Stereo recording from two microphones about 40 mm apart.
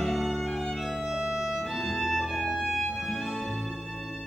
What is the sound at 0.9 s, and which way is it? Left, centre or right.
Music, centre.